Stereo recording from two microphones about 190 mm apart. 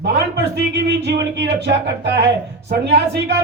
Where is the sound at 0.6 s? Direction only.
65° right (ahead or behind).